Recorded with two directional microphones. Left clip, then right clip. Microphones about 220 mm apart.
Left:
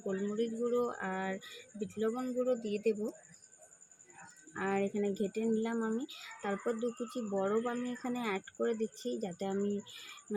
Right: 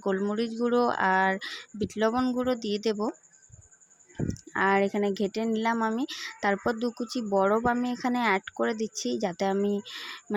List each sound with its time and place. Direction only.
0.0 s speech: 45° right (ahead or behind)
4.5 s speech: 45° right (ahead or behind)